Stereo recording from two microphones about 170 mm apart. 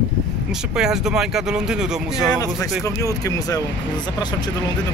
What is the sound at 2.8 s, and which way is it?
Speech, 20° left (ahead or behind).